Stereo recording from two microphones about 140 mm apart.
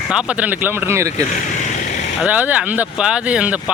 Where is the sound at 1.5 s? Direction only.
60° left (ahead or behind).